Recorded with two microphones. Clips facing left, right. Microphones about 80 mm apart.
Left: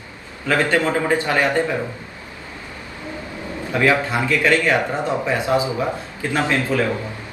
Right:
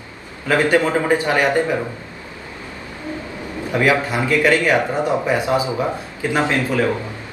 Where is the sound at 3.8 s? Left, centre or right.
Right.